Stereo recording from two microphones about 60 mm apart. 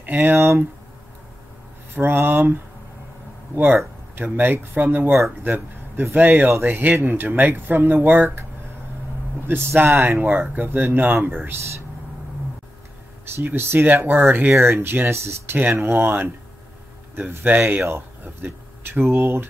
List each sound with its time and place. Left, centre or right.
0.2 s speech: right
2.0 s speech: right
9.5 s speech: right
10.1 s speech: right
13.6 s speech: right
14.5 s speech: right
17.8 s speech: right